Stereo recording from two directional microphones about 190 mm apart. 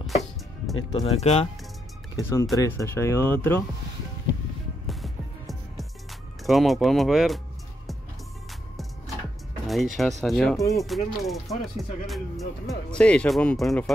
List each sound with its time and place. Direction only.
0.0 s music: centre (ahead or behind)
0.9 s speech: 35° left (ahead or behind)
2.1 s speech: 15° left (ahead or behind)
4.8 s music: centre (ahead or behind)
9.7 s speech: centre (ahead or behind)